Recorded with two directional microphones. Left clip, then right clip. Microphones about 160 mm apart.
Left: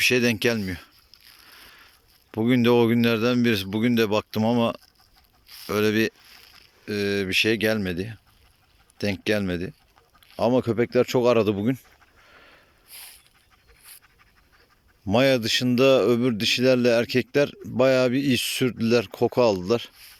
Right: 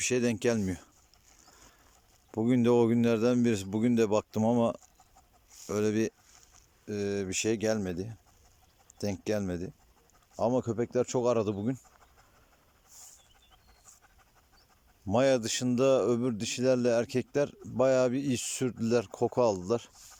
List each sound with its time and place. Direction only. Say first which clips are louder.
0.0 s speech: left 8 dB; 5° right (ahead or behind)
2.3 s speech: left 6 dB; 10° right (ahead or behind)
10.4 s speech: left 7 dB; 5° left (ahead or behind)
15.0 s speech: left 6 dB; centre (ahead or behind)